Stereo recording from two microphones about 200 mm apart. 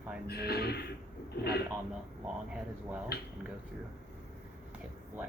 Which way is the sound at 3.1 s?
55° left (ahead or behind).